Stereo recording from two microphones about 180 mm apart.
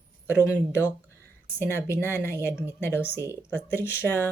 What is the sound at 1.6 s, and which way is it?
Speech, 15° left (ahead or behind).